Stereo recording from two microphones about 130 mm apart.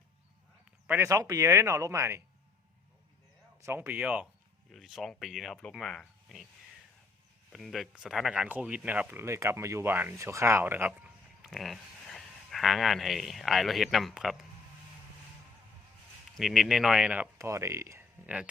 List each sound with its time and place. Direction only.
0.9 s speech: 20° right (ahead or behind)
3.6 s speech: 15° right (ahead or behind); by 6.5 s centre (ahead or behind)
7.5 s speech: centre (ahead or behind)
11.4 s speech: centre (ahead or behind)
16.4 s speech: 5° right (ahead or behind)
17.3 s speech: 20° right (ahead or behind)